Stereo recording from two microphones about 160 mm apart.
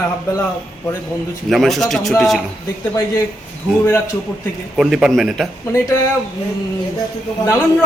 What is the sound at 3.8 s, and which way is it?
Speech, 15° left (ahead or behind).